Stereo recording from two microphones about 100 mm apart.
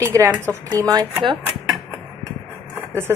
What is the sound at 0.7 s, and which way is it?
Speech, 40° right (ahead or behind).